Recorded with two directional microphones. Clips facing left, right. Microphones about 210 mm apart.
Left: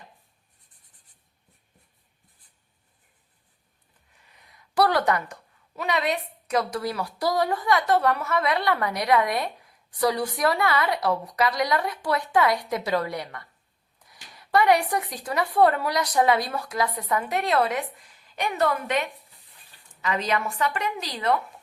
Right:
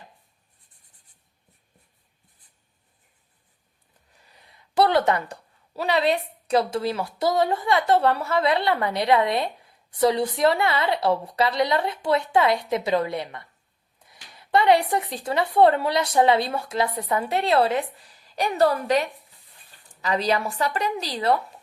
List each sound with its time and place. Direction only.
4.2 s a woman's voice: 35° right (ahead or behind)